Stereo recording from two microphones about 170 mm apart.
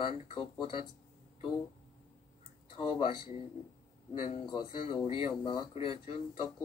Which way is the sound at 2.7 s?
30° left (ahead or behind).